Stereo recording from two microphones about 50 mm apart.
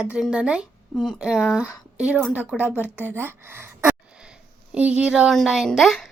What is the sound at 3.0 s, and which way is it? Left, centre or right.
Speech, right.